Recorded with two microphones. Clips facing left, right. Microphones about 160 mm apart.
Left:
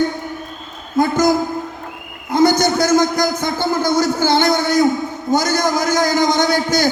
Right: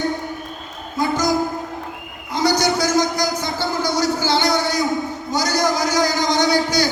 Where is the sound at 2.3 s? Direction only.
50° left (ahead or behind).